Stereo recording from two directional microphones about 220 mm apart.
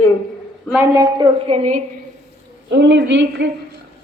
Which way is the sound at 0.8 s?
15° right (ahead or behind).